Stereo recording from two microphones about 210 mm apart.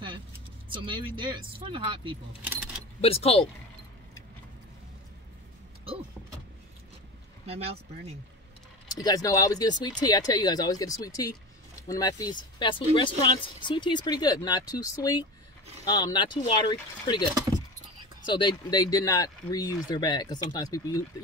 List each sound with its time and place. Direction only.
1.1 s speech: 25° right (ahead or behind)
2.4 s keys jangling: 5° right (ahead or behind)
3.0 s speech: 30° left (ahead or behind)
7.4 s speech: 30° right (ahead or behind)
9.0 s speech: 20° left (ahead or behind)